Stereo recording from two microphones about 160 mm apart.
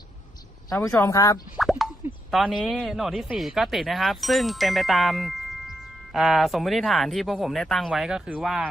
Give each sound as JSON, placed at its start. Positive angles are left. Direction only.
{"t": 0.7, "sound": "speech", "side_deg": 15}
{"t": 1.6, "sound": "plop", "side_deg": 0}
{"t": 2.3, "sound": "speech", "side_deg": 0}